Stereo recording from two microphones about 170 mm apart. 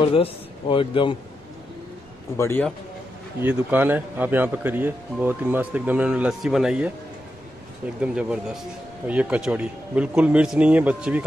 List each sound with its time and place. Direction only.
0.1 s a man's voice: 30° left (ahead or behind)
2.3 s a man's voice: 15° left (ahead or behind)
3.3 s speech: 10° right (ahead or behind)
8.0 s speech: 5° right (ahead or behind)